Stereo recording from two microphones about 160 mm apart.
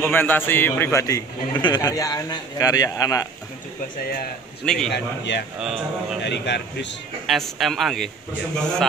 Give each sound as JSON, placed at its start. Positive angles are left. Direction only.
{"t": 0.0, "sound": "a man's voice", "side_deg": 15}
{"t": 4.0, "sound": "a man's voice", "side_deg": 70}
{"t": 4.6, "sound": "speech", "side_deg": 5}
{"t": 4.9, "sound": "speech", "side_deg": 90}
{"t": 5.6, "sound": "speech", "side_deg": 0}
{"t": 6.2, "sound": "speech", "side_deg": 90}
{"t": 7.2, "sound": "speech", "side_deg": 0}